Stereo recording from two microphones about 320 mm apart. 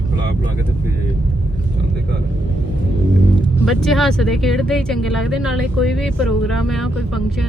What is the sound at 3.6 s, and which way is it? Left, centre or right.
Speech, centre.